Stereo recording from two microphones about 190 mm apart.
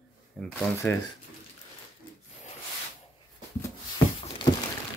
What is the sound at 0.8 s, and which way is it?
Speech, 10° left (ahead or behind).